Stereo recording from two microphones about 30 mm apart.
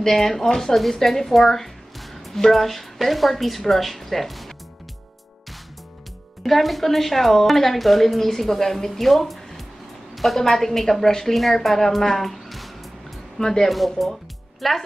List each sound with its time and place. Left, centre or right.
0.0 s a woman's voice: centre
2.0 s music: centre
2.4 s a woman's voice: centre
6.4 s a woman's voice: centre
13.4 s speech: centre
13.7 s a woman's voice: centre